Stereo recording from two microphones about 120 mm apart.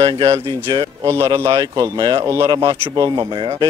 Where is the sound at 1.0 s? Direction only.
25° right (ahead or behind).